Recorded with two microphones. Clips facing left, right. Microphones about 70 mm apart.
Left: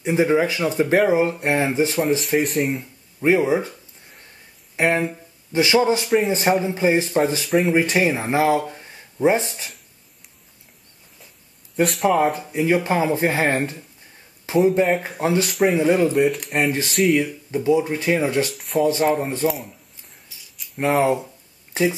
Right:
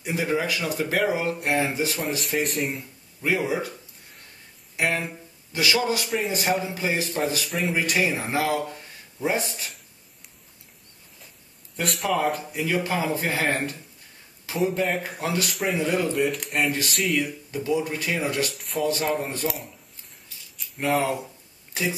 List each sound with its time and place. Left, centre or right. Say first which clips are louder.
0.0 s speech: left 8 dB; left
2.2 s speech: left 6 dB; centre
3.2 s speech: left 7 dB; left
4.7 s speech: left 6 dB; left
11.7 s speech: left 7 dB; centre
12.5 s speech: left 6 dB; left
15.4 s speech: left 8 dB; centre
15.7 s speech: left 5 dB; left
16.1 s speech: left 5 dB; centre
17.2 s speech: left 5 dB; left
18.5 s speech: left 6 dB; centre
20.2 s a sound: right 2 dB; centre
21.0 s speech: left 7 dB; left